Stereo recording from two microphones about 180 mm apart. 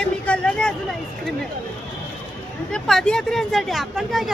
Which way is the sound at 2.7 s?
5° left (ahead or behind).